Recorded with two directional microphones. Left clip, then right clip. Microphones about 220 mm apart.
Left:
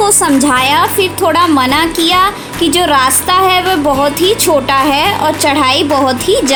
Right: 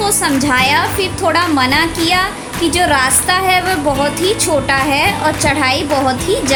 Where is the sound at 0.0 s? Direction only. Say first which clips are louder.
Left 5 dB; 25° left (ahead or behind).